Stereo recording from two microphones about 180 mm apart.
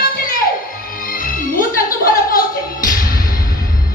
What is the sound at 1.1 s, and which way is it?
Music, 50° left (ahead or behind).